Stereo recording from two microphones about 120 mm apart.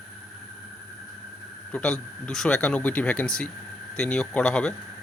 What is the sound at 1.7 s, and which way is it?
Speech, 10° left (ahead or behind).